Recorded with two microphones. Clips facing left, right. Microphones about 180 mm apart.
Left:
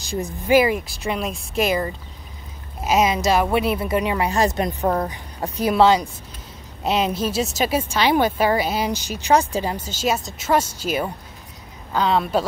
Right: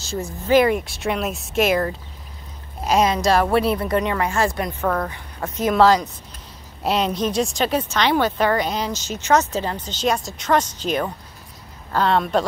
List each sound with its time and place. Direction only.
0.0 s speech: 15° left (ahead or behind)
5.7 s speech: 5° left (ahead or behind)